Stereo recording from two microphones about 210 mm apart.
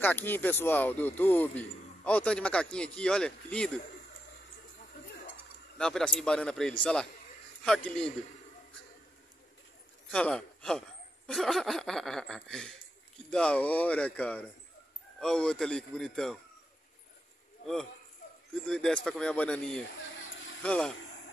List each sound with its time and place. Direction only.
0.0 s a man's voice: 10° left (ahead or behind)
5.8 s speech: 5° left (ahead or behind)
10.1 s a man's voice: 5° left (ahead or behind)
18.5 s speech: 5° left (ahead or behind)
20.0 s a sound: 65° left (ahead or behind)
20.6 s speech: 5° left (ahead or behind)